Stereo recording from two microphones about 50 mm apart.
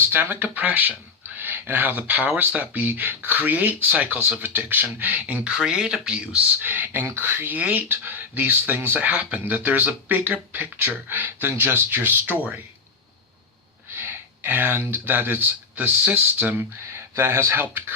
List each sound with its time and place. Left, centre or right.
0.0 s speech: right
5.5 s speech: centre
6.6 s speech: right
13.9 s speech: right
16.9 s speech: right